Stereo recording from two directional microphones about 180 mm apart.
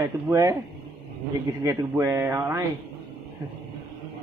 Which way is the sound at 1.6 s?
15° right (ahead or behind).